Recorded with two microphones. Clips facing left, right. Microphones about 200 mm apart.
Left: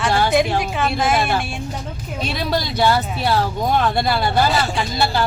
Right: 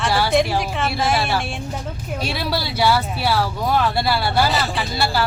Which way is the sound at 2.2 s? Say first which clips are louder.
Left 3 dB; 10° right (ahead or behind).